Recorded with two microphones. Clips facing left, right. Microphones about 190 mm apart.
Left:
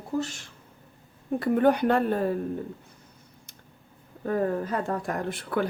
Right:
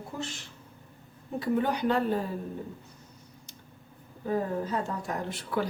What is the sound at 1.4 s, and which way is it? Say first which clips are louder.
Speech: left 5 dB; 55° left (ahead or behind).